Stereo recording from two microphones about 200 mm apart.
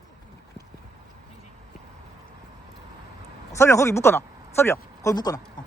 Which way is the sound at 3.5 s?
15° left (ahead or behind).